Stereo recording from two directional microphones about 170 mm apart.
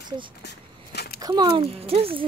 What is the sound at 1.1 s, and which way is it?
Speech, 20° right (ahead or behind).